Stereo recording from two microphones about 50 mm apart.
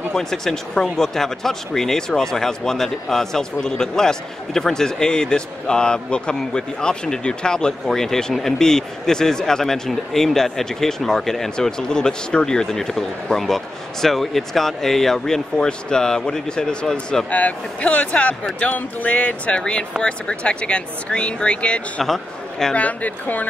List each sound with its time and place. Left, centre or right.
0.1 s speech: centre
17.3 s speech: left
22.0 s a man's voice: centre
22.8 s speech: left